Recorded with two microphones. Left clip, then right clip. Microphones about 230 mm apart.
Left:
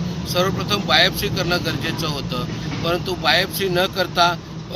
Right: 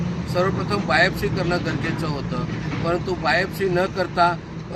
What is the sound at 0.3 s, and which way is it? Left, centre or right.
Speech, centre.